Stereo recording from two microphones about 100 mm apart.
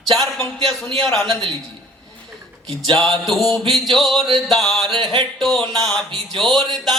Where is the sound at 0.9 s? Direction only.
5° left (ahead or behind).